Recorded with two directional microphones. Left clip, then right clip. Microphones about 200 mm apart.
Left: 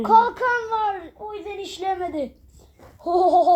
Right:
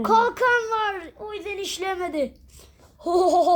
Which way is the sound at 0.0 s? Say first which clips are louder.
Left 2 dB; 35° right (ahead or behind).